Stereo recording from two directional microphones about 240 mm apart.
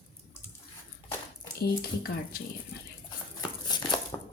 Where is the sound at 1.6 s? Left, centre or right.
Left.